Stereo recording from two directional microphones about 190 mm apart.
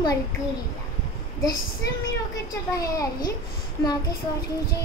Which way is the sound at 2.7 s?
20° left (ahead or behind).